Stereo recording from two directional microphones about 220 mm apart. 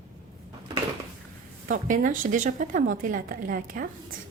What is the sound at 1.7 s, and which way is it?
A woman's voice, 35° right (ahead or behind).